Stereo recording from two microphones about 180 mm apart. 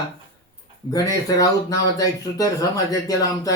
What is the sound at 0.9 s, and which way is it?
Speech, 20° left (ahead or behind).